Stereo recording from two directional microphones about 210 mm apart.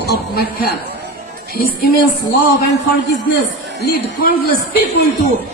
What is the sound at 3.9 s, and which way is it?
Speech, 45° left (ahead or behind).